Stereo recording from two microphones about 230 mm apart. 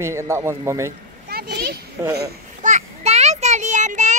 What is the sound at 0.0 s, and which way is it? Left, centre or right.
Speech, centre.